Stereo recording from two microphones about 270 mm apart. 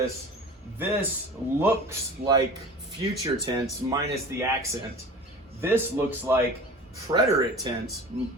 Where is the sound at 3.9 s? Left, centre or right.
Centre.